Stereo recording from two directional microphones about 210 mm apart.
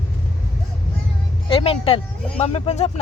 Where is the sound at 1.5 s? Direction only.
25° left (ahead or behind).